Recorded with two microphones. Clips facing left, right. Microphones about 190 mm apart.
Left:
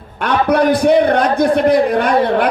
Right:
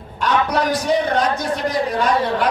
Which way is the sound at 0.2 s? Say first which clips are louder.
Left 5 dB; 55° left (ahead or behind).